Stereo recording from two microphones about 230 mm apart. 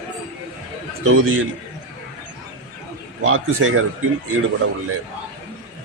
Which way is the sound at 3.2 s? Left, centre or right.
Right.